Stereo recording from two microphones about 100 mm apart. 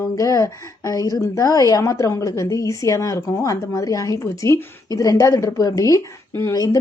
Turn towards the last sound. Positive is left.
turn(degrees=40)  # may be behind; listen again after turning